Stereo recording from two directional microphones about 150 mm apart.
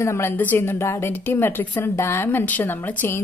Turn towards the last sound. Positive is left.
turn(degrees=15)  # may be behind; listen again after turning